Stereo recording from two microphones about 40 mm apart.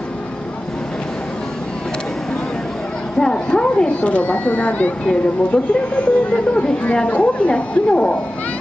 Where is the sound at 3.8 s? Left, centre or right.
Left.